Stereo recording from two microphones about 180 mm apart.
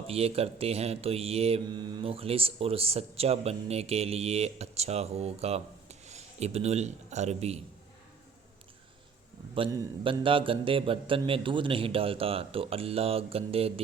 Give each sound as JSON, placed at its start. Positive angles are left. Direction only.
{"t": 0.1, "sound": "speech", "side_deg": -35}
{"t": 10.0, "sound": "speech", "side_deg": -30}